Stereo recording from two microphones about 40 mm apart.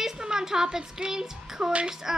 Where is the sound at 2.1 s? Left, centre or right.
Centre.